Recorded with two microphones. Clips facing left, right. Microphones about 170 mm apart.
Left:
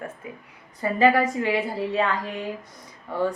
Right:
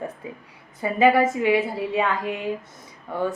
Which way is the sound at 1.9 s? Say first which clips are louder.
Right 1 dB; 15° right (ahead or behind).